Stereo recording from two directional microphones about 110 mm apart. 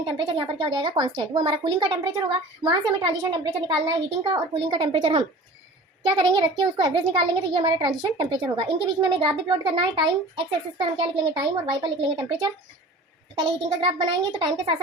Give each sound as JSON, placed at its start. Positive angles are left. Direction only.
{"t": 0.0, "sound": "a child's voice", "side_deg": -50}